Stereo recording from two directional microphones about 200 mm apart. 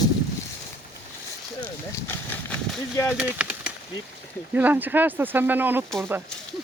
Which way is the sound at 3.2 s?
5° right (ahead or behind).